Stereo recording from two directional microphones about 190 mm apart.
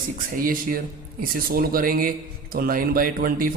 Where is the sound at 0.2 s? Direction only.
45° right (ahead or behind).